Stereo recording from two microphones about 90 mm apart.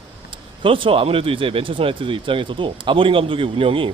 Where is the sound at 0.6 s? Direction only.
80° right.